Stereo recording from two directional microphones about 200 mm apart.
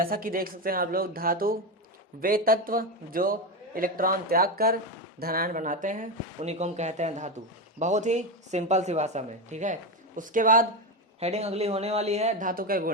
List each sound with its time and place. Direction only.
0.0 s speech: 45° right (ahead or behind)
11.2 s speech: 30° right (ahead or behind)